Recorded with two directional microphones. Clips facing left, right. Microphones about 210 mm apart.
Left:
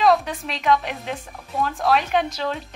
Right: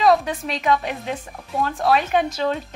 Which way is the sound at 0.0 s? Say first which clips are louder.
Right 1 dB; centre (ahead or behind).